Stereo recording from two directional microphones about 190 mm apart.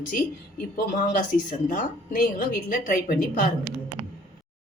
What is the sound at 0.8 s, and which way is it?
Speech, 45° left (ahead or behind).